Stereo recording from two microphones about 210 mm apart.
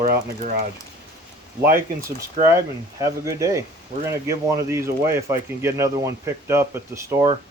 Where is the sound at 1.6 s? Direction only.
10° right (ahead or behind).